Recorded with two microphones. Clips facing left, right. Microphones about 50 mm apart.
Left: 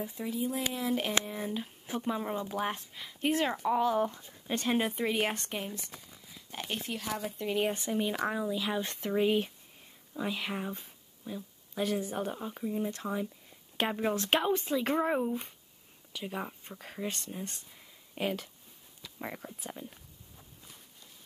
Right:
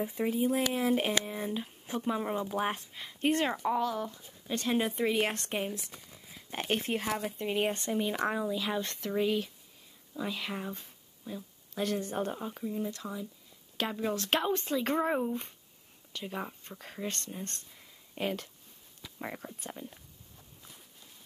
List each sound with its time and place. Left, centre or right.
0.1 s speech: right
1.2 s speech: centre
3.9 s speech: left
4.6 s speech: centre
5.5 s speech: centre
6.5 s speech: right
7.4 s speech: centre
7.7 s speech: centre
12.6 s speech: centre
14.3 s speech: centre